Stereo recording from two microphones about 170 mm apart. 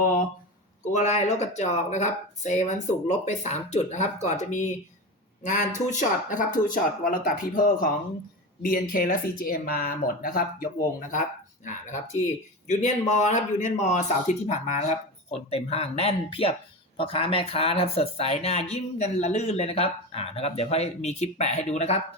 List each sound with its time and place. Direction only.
0.9 s speech: 40° left (ahead or behind)
11.6 s speech: 45° left (ahead or behind)